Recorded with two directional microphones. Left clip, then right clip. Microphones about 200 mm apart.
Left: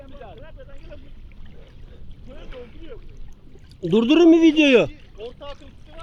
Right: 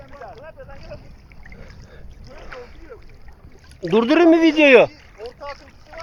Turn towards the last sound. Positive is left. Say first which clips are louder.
# right 2 dB
turn(degrees=-10)  # may be behind; listen again after turning